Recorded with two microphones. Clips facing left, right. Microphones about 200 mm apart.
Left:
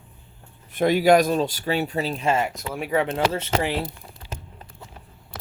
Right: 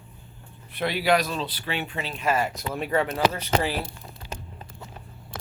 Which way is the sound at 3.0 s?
25° left (ahead or behind).